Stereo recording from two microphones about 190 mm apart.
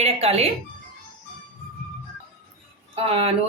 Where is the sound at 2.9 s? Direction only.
30° right (ahead or behind).